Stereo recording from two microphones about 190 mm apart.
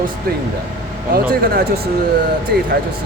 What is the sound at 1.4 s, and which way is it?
Speech, 55° right (ahead or behind).